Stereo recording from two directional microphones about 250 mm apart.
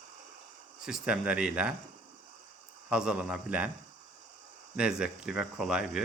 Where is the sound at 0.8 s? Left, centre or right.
Centre.